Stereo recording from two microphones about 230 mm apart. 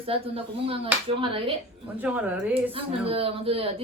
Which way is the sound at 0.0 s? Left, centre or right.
Right.